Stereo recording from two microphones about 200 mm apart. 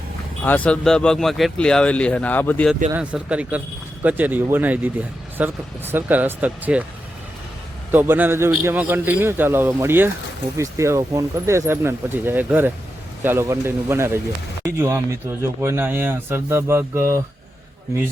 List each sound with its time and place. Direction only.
0.4 s speech: 10° left (ahead or behind)
2.9 s a man's voice: 5° right (ahead or behind)
7.9 s a man's voice: 10° right (ahead or behind)